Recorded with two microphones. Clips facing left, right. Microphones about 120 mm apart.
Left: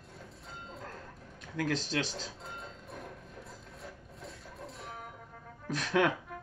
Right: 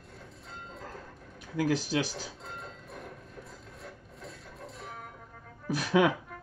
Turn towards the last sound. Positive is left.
turn(degrees=-10)  # may be behind; listen again after turning